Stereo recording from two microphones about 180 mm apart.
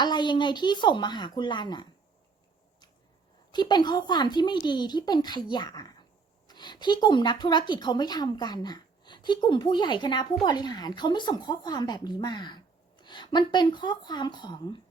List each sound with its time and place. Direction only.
0.0 s speech: 25° left (ahead or behind)
3.5 s speech: 25° left (ahead or behind)